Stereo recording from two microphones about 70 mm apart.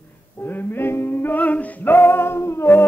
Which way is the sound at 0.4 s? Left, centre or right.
Left.